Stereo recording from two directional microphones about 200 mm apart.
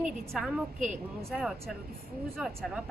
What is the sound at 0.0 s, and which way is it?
A woman's voice, 5° right (ahead or behind).